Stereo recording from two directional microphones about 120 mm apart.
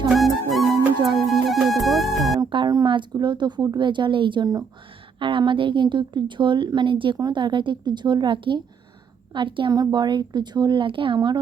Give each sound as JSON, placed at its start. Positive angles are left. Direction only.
{"t": 0.5, "sound": "music", "side_deg": 0}
{"t": 2.5, "sound": "a woman's voice", "side_deg": -35}